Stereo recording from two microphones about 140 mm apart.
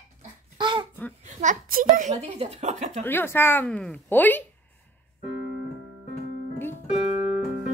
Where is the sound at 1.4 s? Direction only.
75° right (ahead or behind).